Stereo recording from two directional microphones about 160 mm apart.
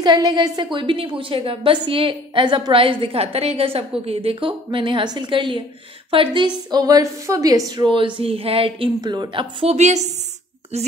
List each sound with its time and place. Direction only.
0.0 s a woman's voice: 25° right (ahead or behind); by 10.1 s 45° right (ahead or behind)